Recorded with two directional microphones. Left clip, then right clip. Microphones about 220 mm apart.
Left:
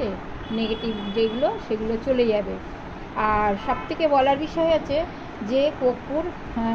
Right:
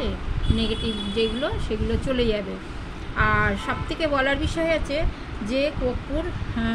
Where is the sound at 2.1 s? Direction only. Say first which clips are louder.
Left 4 dB; 20° right (ahead or behind).